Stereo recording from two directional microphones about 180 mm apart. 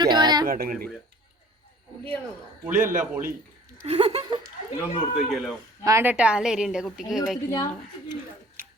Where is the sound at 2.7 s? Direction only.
50° right (ahead or behind).